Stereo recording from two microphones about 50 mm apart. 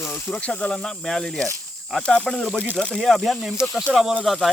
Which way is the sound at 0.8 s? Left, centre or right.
Centre.